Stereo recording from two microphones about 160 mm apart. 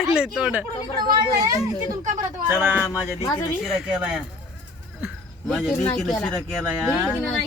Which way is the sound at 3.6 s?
5° right (ahead or behind).